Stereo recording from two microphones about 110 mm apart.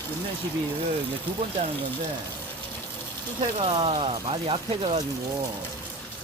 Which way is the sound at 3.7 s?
55° right (ahead or behind).